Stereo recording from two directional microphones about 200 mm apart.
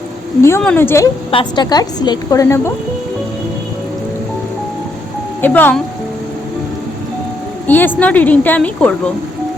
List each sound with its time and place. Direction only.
0.4 s a woman's voice: 10° left (ahead or behind)
1.3 s a woman's voice: 25° left (ahead or behind)
5.4 s speech: 10° left (ahead or behind)
7.7 s a woman's voice: 10° left (ahead or behind)